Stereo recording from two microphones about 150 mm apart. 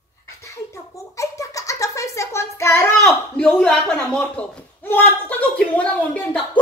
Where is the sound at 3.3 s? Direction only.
5° left (ahead or behind).